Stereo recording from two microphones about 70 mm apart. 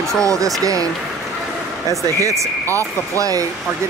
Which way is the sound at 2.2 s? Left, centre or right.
Right.